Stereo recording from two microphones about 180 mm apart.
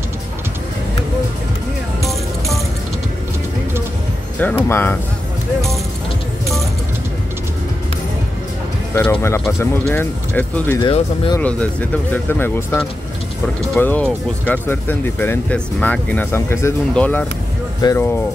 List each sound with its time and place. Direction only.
2.0 s music: centre (ahead or behind)
4.4 s speech: 10° left (ahead or behind)
8.9 s speech: 10° left (ahead or behind)
10.8 s speech: 25° left (ahead or behind)
11.4 s speech: 10° left (ahead or behind)
13.7 s speech: 10° left (ahead or behind)
17.8 s speech: 25° left (ahead or behind)